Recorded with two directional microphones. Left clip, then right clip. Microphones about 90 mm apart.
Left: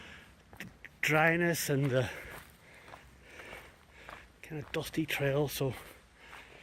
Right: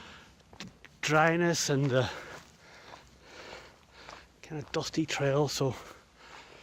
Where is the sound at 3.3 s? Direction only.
60° right (ahead or behind).